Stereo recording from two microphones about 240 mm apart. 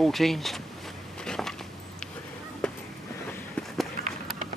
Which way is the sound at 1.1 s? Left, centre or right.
Centre.